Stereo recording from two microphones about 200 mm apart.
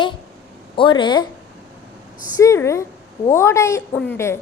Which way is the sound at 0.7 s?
25° left (ahead or behind).